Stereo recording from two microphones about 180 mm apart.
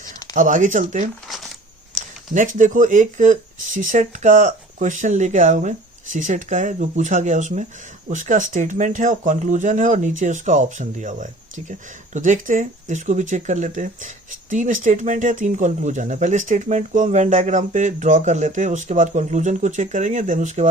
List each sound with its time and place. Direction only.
0.1 s a sound: 20° left (ahead or behind)
0.3 s speech: 45° right (ahead or behind)
2.3 s speech: 45° right (ahead or behind)